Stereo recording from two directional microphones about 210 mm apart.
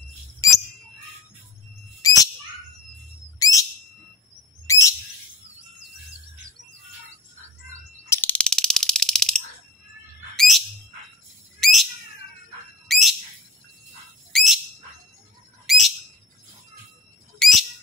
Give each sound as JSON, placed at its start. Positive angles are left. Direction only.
{"t": 2.0, "sound": "bird", "side_deg": 15}
{"t": 3.3, "sound": "bird", "side_deg": 15}
{"t": 4.6, "sound": "bird", "side_deg": 15}
{"t": 8.1, "sound": "a sound", "side_deg": 10}
{"t": 10.3, "sound": "bird", "side_deg": 0}
{"t": 11.6, "sound": "bird", "side_deg": 0}
{"t": 14.3, "sound": "bird", "side_deg": 0}
{"t": 15.6, "sound": "bird", "side_deg": 0}
{"t": 17.4, "sound": "whistle", "side_deg": 0}